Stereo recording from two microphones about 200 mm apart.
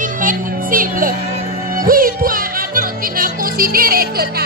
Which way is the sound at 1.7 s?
45° right (ahead or behind).